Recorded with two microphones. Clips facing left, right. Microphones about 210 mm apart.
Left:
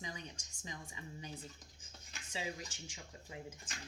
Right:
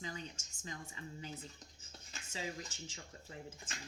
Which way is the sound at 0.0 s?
15° left (ahead or behind).